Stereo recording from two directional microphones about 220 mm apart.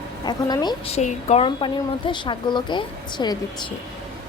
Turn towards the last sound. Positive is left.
turn(degrees=20)  # may be behind; listen again after turning